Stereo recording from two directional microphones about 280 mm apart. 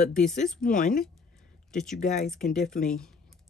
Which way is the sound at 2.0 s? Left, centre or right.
Left.